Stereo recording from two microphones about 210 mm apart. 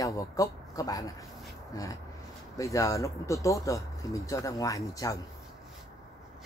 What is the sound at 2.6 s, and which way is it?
Speech, 15° left (ahead or behind).